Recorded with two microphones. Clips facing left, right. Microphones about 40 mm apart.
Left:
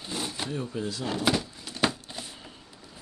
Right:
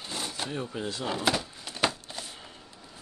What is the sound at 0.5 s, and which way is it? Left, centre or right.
Speech, right.